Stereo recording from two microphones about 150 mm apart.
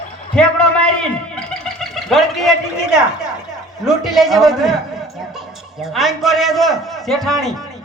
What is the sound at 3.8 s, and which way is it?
A man's voice, centre (ahead or behind).